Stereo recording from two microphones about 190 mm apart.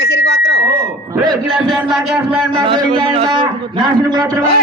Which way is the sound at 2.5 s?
25° right (ahead or behind).